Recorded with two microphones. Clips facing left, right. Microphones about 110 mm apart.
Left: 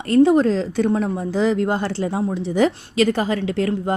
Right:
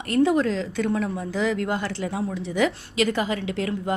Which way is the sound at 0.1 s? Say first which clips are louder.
Left 6 dB; 30° left (ahead or behind).